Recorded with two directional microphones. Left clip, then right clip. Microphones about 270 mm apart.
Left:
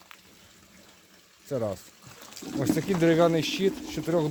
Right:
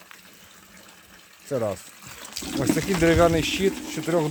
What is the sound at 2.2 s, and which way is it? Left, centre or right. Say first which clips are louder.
Water: right 5 dB; right.